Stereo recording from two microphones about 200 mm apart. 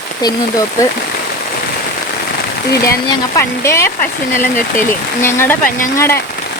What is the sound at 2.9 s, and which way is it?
Speech, 15° left (ahead or behind).